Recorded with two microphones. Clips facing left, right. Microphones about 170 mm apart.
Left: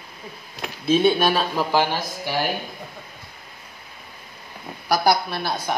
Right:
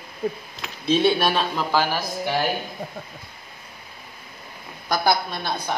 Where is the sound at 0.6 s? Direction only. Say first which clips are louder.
Left 2 dB; 5° left (ahead or behind).